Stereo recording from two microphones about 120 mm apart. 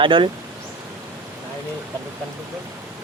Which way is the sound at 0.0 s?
45° right (ahead or behind).